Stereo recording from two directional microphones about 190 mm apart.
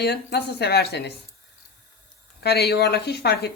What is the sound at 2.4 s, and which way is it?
Speech, 55° left (ahead or behind).